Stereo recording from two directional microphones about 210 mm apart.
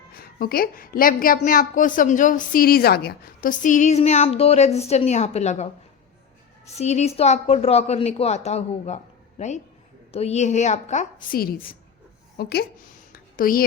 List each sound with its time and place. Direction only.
0.1 s a woman's voice: 45° left (ahead or behind)
6.7 s a woman's voice: 30° left (ahead or behind)
10.1 s a woman's voice: 30° left (ahead or behind); by 12.6 s 50° left (ahead or behind)
13.1 s a sound: 45° left (ahead or behind)